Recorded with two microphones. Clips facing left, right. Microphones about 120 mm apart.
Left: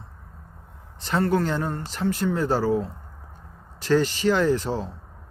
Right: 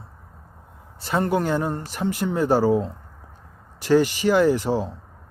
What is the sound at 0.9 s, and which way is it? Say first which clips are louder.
Speech: even; 10° right (ahead or behind).